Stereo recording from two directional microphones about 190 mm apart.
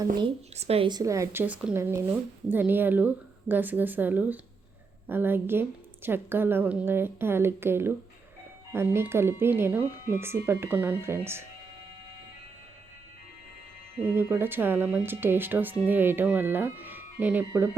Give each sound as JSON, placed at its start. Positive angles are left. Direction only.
{"t": 0.2, "sound": "speech", "side_deg": -35}
{"t": 14.0, "sound": "speech", "side_deg": -10}